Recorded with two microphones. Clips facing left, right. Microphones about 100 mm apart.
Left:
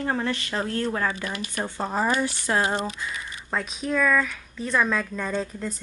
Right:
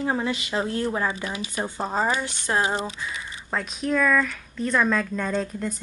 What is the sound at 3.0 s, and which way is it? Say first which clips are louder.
Speech: even; centre (ahead or behind).